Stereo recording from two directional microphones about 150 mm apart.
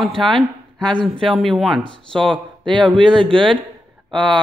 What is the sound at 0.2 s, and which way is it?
Speech, centre (ahead or behind).